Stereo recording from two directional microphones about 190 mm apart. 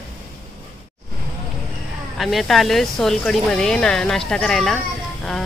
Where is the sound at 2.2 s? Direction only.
Centre (ahead or behind).